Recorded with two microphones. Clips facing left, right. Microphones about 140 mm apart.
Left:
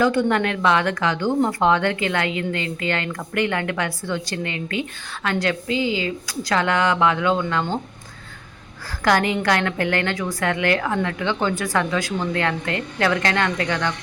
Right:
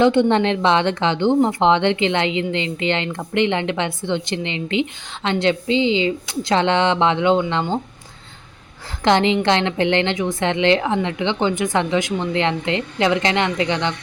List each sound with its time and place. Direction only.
0.0 s speech: 25° right (ahead or behind)
9.0 s speech: 20° right (ahead or behind)